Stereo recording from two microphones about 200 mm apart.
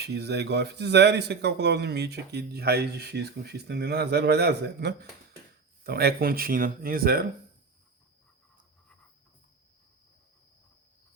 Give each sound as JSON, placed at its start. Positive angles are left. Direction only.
{"t": 0.0, "sound": "speech", "side_deg": -55}